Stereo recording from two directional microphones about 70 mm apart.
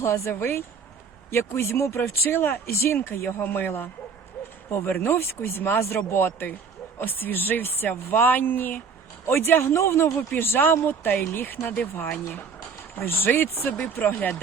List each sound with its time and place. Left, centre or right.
0.0 s speech: left
5.1 s speech: left